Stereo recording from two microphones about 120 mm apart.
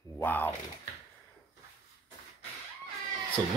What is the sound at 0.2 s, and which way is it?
Typing, 15° left (ahead or behind).